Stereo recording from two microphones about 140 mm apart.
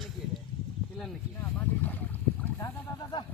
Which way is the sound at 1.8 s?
10° left (ahead or behind).